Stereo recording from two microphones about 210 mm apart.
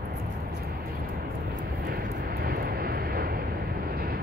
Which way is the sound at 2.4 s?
45° right (ahead or behind).